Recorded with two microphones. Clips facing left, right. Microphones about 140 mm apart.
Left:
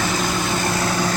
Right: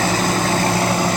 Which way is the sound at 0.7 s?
30° right (ahead or behind).